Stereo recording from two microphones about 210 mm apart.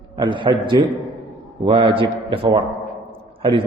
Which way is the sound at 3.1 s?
25° right (ahead or behind).